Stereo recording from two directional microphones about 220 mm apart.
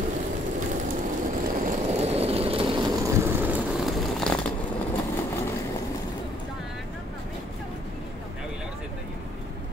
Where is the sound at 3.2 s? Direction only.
5° right (ahead or behind).